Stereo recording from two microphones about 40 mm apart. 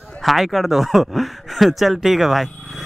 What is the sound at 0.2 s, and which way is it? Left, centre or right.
Speech, centre.